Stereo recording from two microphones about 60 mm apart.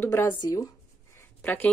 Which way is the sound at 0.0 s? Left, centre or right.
Left.